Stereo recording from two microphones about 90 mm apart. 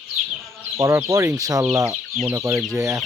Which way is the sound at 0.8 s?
35° right (ahead or behind).